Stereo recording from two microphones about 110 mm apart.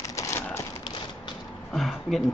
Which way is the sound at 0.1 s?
25° left (ahead or behind).